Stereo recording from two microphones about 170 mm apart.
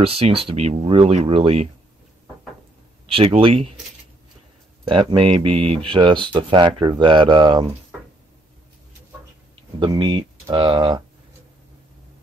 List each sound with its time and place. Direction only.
0.0 s speech: 35° right (ahead or behind)
3.1 s speech: 30° right (ahead or behind)
4.8 s speech: 25° right (ahead or behind)
9.8 s speech: 30° right (ahead or behind)